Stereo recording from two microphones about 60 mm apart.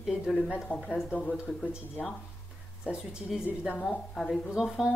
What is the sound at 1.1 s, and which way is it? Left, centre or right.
Speech, left.